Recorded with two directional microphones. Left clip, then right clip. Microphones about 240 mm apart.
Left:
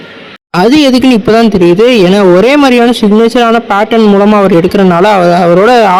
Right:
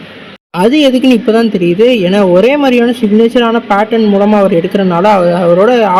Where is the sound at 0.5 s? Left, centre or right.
Left.